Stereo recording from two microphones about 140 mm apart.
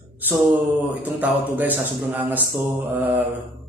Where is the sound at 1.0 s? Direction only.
10° right (ahead or behind).